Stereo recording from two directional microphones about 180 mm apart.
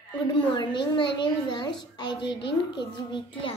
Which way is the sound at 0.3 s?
25° left (ahead or behind).